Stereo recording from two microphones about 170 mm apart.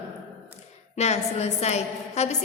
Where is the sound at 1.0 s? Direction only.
40° left (ahead or behind).